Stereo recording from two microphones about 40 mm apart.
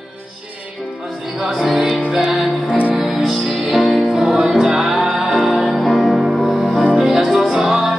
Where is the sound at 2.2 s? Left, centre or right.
Right.